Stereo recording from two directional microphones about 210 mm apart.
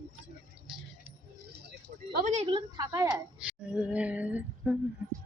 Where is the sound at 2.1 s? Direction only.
35° right (ahead or behind); by 3.1 s 15° right (ahead or behind).